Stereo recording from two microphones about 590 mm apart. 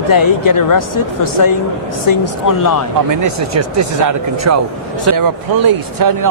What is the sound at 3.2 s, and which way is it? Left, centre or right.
Speech, right.